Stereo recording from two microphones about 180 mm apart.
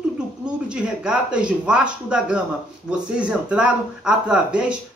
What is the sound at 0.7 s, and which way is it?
Speech, 5° right (ahead or behind).